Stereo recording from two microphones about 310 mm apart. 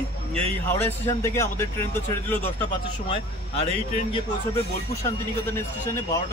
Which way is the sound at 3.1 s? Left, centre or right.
Centre.